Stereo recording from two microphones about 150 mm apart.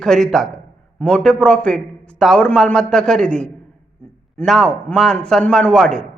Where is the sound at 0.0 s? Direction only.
5° left (ahead or behind).